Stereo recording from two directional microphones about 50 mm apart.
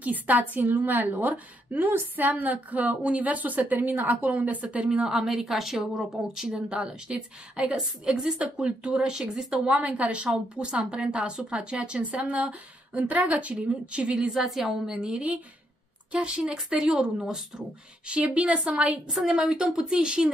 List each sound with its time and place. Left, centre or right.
0.0 s a woman's voice: right
4.9 s a woman's voice: centre
9.7 s a woman's voice: right
14.3 s a woman's voice: centre
15.0 s a woman's voice: right
16.5 s a woman's voice: centre; by 18.5 s right
18.5 s a woman's voice: centre